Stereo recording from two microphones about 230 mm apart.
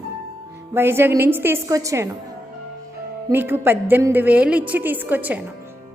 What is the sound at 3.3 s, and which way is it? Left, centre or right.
A woman's voice, centre.